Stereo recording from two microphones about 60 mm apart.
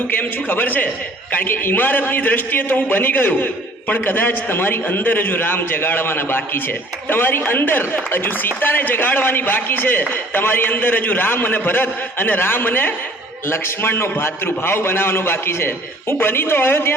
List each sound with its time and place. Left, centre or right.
0.1 s a man's voice: left